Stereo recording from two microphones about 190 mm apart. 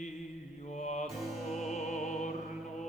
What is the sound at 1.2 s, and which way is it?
Music, centre (ahead or behind).